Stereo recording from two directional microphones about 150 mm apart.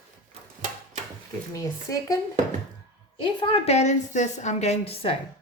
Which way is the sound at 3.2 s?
35° left (ahead or behind).